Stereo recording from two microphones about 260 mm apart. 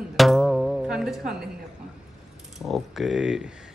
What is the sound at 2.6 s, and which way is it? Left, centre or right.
Speech, centre.